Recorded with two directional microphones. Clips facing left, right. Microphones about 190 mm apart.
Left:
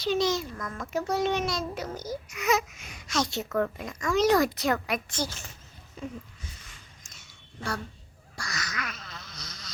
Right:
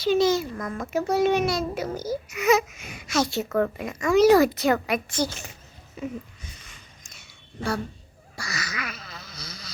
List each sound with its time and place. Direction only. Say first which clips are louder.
0.0 s a child's voice: right 6 dB; centre (ahead or behind)
5.1 s a child's voice: right 6 dB; 15° right (ahead or behind)
6.4 s a sound: right 2 dB; 20° right (ahead or behind); by 9.7 s 5° right (ahead or behind)